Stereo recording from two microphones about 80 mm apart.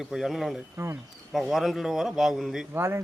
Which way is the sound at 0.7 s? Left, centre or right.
Right.